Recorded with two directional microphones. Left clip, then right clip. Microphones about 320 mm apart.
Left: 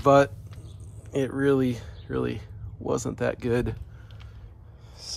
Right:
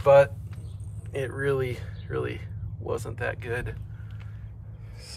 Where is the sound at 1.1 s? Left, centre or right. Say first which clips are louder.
Left 4 dB; left.